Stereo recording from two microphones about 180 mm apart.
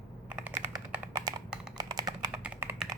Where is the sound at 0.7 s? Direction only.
20° right (ahead or behind).